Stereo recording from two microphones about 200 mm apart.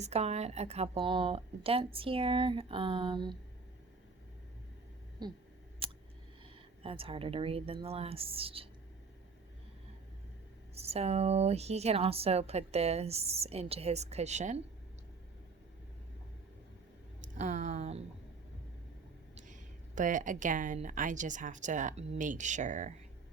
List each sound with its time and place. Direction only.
0.0 s speech: 35° right (ahead or behind)
5.2 s speech: 20° right (ahead or behind)
5.8 s a sound: 25° right (ahead or behind)
6.4 s speech: 25° right (ahead or behind)
10.8 s a woman's voice: 30° right (ahead or behind)
17.3 s a woman's voice: 40° right (ahead or behind)
19.5 s a woman's voice: 40° right (ahead or behind)